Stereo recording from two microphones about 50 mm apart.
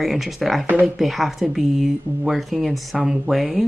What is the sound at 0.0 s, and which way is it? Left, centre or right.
Speech, centre.